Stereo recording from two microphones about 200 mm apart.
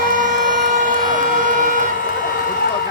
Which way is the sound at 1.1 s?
40° right (ahead or behind).